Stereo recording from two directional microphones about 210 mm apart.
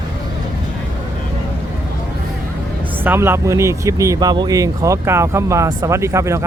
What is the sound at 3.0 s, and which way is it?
Speech, 10° right (ahead or behind).